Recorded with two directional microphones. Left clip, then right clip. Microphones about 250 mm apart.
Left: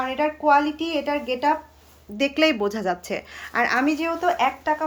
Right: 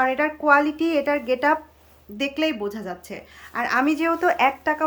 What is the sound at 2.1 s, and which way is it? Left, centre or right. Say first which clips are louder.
Speech: left 4 dB; centre.